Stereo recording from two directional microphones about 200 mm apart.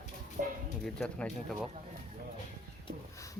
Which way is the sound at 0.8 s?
5° left (ahead or behind).